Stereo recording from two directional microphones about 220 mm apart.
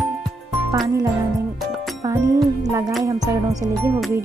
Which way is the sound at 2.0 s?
15° right (ahead or behind).